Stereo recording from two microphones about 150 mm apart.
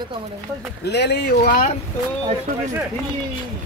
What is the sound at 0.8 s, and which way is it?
Speech, 90° left.